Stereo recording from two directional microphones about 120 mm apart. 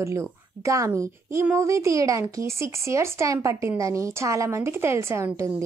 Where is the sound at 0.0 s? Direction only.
25° right (ahead or behind).